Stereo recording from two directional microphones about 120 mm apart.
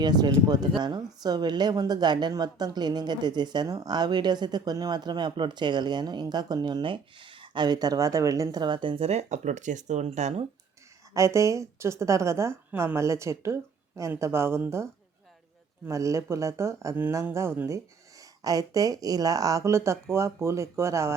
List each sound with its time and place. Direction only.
0.0 s a woman's voice: 35° right (ahead or behind)
9.0 s speech: 80° right
11.1 s a woman's voice: 25° right (ahead or behind)
15.9 s a woman's voice: 25° right (ahead or behind)